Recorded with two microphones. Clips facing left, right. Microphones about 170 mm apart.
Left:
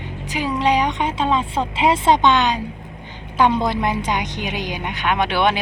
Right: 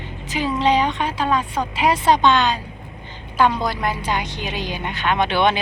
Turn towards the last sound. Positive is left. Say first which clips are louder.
# even
turn(degrees=10)  # may be behind; listen again after turning